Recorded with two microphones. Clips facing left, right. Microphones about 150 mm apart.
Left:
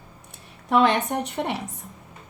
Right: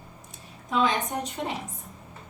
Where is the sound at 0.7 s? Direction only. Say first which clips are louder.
Left 5 dB; 65° left (ahead or behind).